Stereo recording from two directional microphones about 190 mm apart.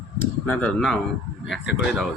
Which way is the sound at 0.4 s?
5° left (ahead or behind).